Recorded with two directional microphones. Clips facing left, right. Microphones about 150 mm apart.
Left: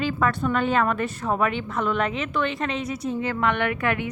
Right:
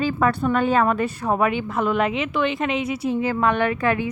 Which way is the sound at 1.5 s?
5° right (ahead or behind).